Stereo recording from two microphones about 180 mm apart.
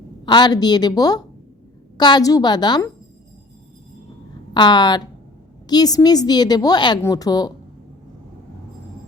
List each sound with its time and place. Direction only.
0.3 s a woman's voice: 25° left (ahead or behind)
4.5 s a woman's voice: 25° left (ahead or behind)